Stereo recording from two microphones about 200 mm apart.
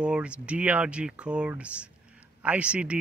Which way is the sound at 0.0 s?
5° right (ahead or behind).